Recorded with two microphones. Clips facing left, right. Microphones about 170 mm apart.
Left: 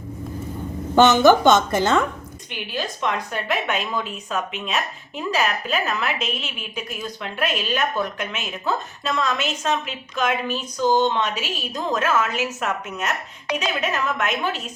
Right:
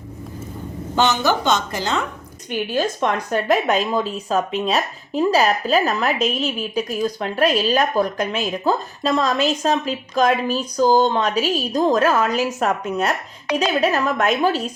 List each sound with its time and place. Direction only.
0.9 s a woman's voice: 55° left (ahead or behind)
2.5 s speech: 45° right (ahead or behind)